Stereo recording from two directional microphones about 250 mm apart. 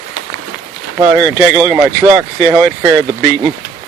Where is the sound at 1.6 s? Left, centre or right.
Centre.